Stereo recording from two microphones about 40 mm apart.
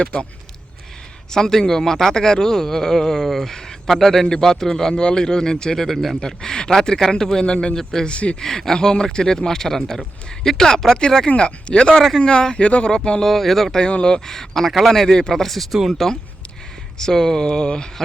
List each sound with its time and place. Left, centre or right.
0.0 s speech: left
1.3 s a man's voice: centre
6.1 s a man's voice: centre
7.8 s a man's voice: centre
8.0 s speech: left
8.4 s a man's voice: centre; by 12.9 s left
12.9 s speech: centre
13.2 s speech: centre
14.0 s a man's voice: centre
17.0 s a man's voice: centre